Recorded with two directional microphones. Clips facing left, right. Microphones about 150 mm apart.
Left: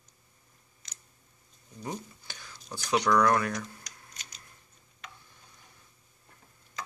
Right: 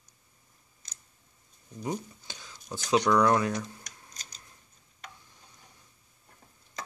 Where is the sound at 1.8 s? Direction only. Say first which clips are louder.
Right 4 dB; 20° right (ahead or behind).